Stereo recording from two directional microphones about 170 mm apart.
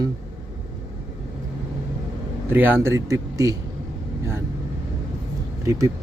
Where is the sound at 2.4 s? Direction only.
10° right (ahead or behind).